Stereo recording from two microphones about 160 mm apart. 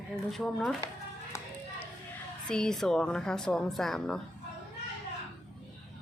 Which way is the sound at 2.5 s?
5° left (ahead or behind).